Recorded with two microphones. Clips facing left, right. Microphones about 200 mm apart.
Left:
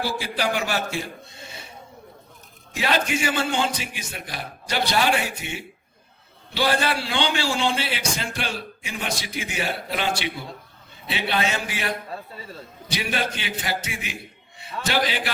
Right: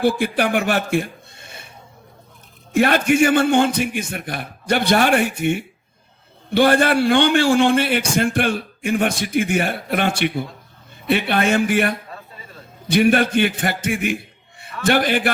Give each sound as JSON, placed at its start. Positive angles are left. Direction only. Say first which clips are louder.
{"t": 0.0, "sound": "speech", "louder": "right 8 dB", "side_deg": -55}
{"t": 2.7, "sound": "a man's voice", "louder": "right 9 dB", "side_deg": -55}
{"t": 12.1, "sound": "a sound", "louder": "left 3 dB", "side_deg": 30}
{"t": 12.9, "sound": "a man's voice", "louder": "right 12 dB", "side_deg": -55}